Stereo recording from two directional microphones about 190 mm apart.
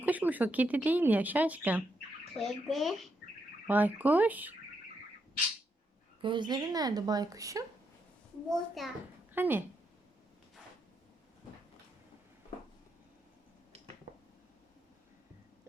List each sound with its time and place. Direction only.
0.0 s speech: 10° right (ahead or behind)
6.2 s a woman's voice: 25° right (ahead or behind)
8.4 s speech: centre (ahead or behind)
9.3 s speech: 10° right (ahead or behind)
13.7 s a sound: 35° right (ahead or behind)